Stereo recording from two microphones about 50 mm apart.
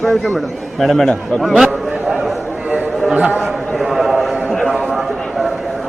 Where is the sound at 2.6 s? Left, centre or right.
Right.